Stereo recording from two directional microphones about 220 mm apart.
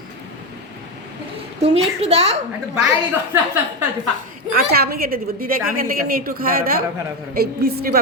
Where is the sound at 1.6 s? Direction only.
30° right (ahead or behind).